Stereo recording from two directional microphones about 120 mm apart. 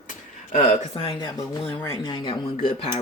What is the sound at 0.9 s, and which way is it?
Speech, 50° left (ahead or behind).